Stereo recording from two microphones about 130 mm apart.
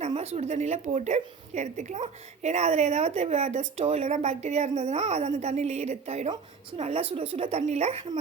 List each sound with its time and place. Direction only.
0.0 s a woman's voice: 55° right (ahead or behind)